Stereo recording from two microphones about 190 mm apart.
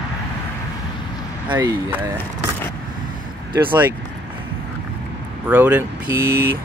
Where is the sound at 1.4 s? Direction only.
10° right (ahead or behind).